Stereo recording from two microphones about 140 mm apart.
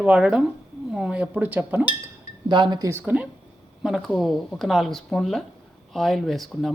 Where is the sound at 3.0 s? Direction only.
10° right (ahead or behind).